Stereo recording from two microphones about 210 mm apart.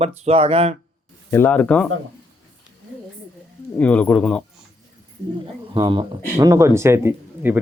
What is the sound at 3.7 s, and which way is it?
Speech, 5° left (ahead or behind).